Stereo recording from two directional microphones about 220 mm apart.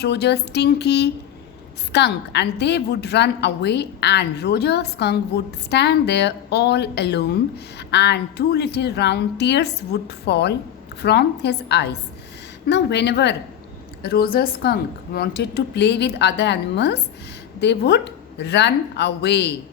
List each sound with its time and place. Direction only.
0.0 s a woman's voice: 50° left (ahead or behind)